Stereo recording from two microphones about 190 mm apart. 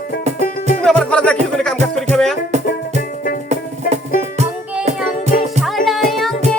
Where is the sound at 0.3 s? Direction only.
45° left (ahead or behind).